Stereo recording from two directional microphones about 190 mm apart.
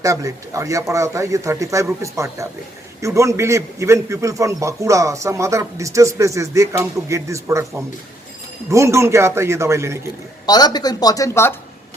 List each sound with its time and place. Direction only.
0.0 s a man's voice: 15° right (ahead or behind)
10.4 s speech: 20° left (ahead or behind)